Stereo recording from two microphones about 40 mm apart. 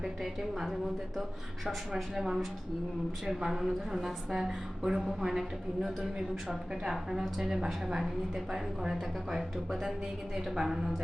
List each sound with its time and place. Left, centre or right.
0.0 s a woman's voice: centre
2.2 s a woman's voice: centre